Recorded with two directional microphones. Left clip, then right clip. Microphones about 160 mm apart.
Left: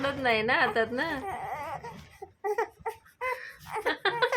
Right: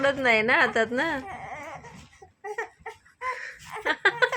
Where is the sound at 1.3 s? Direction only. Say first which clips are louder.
Left 3 dB; 20° left (ahead or behind).